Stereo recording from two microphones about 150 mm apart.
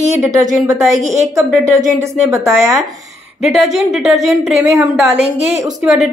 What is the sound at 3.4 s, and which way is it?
A woman's voice, centre (ahead or behind).